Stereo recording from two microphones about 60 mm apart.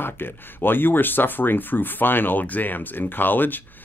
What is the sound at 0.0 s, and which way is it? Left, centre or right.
Speech, left.